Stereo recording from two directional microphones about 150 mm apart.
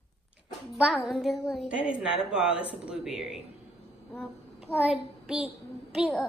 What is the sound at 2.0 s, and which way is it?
Speech, 5° right (ahead or behind).